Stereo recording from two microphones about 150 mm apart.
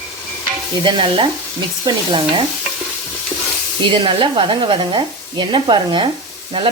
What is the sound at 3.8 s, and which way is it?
Speech, 35° right (ahead or behind).